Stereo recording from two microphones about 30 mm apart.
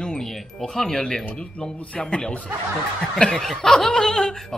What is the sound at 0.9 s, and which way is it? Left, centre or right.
Speech, left.